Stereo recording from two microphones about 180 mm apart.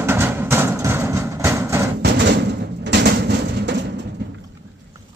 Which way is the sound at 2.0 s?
70° right (ahead or behind).